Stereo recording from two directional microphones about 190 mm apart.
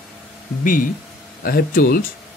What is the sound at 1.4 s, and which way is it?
Speech, 50° left (ahead or behind).